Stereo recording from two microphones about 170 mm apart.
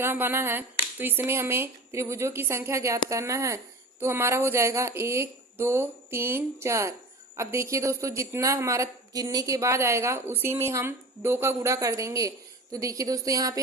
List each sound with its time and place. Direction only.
0.0 s a woman's voice: 15° right (ahead or behind)